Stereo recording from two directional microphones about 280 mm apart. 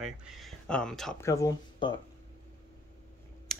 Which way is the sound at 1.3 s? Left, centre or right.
Centre.